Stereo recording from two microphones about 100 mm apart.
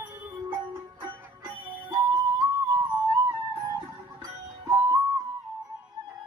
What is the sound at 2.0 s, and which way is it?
Music, 40° right (ahead or behind).